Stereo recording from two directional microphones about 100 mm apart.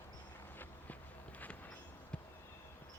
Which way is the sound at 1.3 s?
15° left (ahead or behind).